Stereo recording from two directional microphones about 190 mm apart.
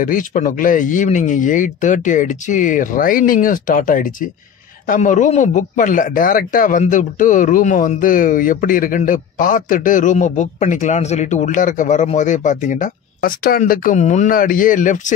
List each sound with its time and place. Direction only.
0.0 s a man's voice: 45° left (ahead or behind)